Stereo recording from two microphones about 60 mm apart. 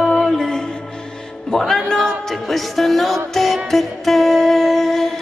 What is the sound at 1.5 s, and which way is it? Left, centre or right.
Speech, centre.